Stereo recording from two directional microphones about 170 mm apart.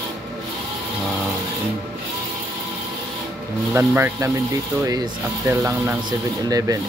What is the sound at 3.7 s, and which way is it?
Speech, 15° right (ahead or behind).